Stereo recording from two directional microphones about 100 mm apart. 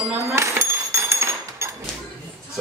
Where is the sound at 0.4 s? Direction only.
25° right (ahead or behind).